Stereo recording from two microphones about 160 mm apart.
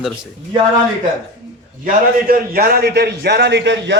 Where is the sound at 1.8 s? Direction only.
65° right (ahead or behind).